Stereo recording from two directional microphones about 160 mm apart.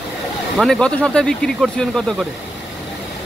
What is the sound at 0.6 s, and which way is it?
Speech, 5° left (ahead or behind).